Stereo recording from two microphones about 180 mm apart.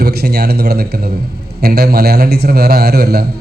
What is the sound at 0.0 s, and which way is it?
A man's voice, 60° right (ahead or behind).